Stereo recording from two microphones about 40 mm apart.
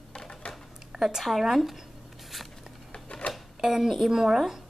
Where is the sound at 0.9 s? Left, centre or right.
Centre.